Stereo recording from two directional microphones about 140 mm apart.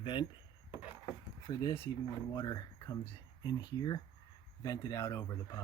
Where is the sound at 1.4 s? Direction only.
35° left (ahead or behind).